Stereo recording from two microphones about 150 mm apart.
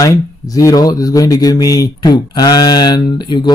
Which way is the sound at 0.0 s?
25° left (ahead or behind).